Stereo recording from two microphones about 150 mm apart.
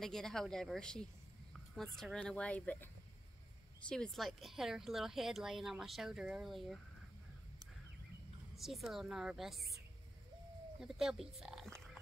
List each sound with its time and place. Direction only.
0.0 s a woman's voice: 5° left (ahead or behind)
8.5 s a woman's voice: centre (ahead or behind)
10.8 s speech: 5° right (ahead or behind)